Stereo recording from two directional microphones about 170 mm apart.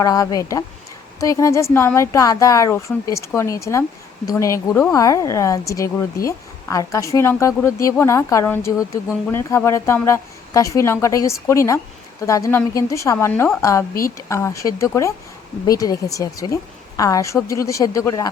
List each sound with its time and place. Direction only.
0.0 s a woman's voice: 20° left (ahead or behind)